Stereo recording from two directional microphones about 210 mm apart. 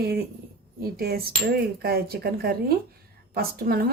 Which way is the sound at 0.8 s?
45° right (ahead or behind).